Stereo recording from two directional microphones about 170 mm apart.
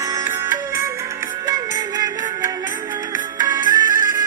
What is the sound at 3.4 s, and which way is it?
Music, 20° right (ahead or behind).